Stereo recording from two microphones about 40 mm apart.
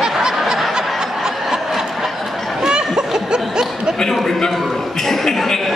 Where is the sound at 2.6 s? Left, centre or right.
Centre.